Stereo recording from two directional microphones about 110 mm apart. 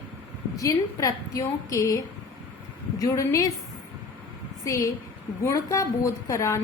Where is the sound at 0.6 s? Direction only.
30° left (ahead or behind).